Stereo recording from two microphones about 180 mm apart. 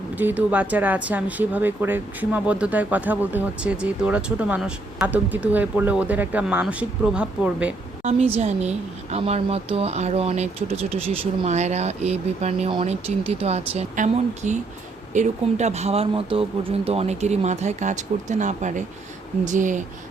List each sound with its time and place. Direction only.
0.2 s speech: 10° right (ahead or behind)
8.4 s speech: 40° right (ahead or behind)